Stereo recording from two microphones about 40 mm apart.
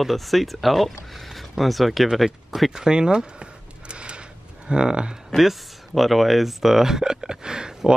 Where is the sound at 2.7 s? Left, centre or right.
Centre.